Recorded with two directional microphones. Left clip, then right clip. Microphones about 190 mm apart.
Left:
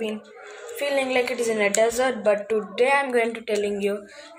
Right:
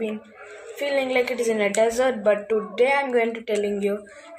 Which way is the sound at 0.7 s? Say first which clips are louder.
Even; 5° right (ahead or behind).